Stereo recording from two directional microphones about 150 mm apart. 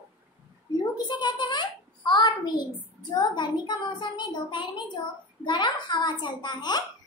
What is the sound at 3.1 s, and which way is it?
A child's voice, 30° left (ahead or behind).